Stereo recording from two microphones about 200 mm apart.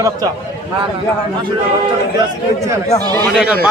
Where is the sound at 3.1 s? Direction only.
10° left (ahead or behind).